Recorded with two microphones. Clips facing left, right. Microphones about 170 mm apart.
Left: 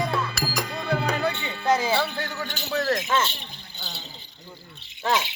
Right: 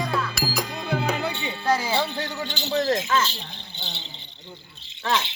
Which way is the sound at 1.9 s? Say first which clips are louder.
Even; 15° right (ahead or behind).